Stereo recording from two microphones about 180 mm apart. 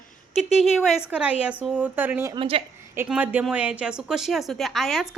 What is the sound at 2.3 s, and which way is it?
Speech, 30° right (ahead or behind).